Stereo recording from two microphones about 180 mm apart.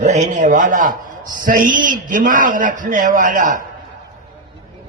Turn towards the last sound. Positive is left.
turn(degrees=-45)  # may be behind; listen again after turning